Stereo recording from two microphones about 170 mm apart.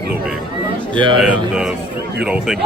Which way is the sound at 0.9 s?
30° right (ahead or behind).